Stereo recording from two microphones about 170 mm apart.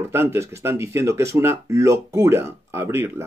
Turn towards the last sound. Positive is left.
turn(degrees=-15)  # may be behind; listen again after turning